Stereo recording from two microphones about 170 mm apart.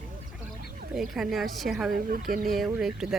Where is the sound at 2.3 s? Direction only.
55° right (ahead or behind).